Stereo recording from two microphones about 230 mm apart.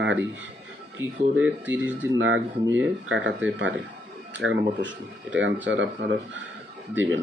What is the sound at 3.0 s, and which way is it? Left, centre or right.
Speech, right.